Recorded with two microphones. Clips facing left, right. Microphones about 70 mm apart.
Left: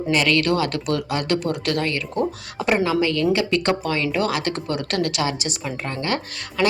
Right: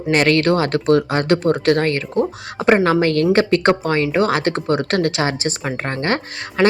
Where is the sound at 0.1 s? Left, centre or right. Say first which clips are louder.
Right 5 dB; right.